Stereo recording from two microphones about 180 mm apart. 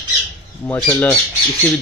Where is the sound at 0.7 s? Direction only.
10° left (ahead or behind).